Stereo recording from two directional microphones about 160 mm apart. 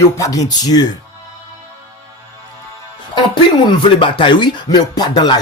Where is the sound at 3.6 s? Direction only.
30° left (ahead or behind).